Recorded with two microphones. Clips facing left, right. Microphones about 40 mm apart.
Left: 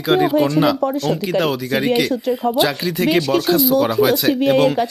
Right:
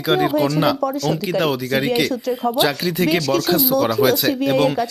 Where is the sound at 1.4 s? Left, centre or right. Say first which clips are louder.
Right 1 dB; centre.